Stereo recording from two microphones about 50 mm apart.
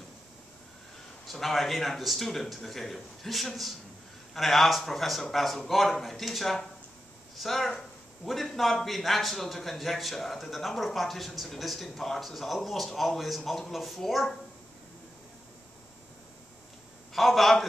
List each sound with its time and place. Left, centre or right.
1.2 s a man's voice: centre
17.1 s a man's voice: centre